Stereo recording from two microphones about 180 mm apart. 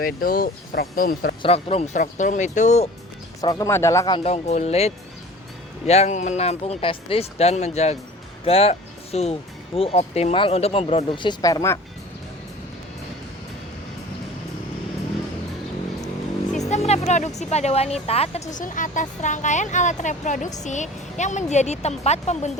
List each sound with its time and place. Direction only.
0.0 s speech: 55° left (ahead or behind)
1.4 s speech: 35° left (ahead or behind)
3.4 s speech: 20° left (ahead or behind)
16.6 s speech: 40° left (ahead or behind)